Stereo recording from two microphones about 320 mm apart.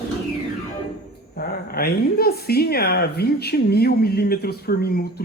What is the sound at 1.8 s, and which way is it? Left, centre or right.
A man's voice, left.